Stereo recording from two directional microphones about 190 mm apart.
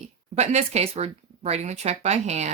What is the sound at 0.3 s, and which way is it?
Speech, 35° right (ahead or behind).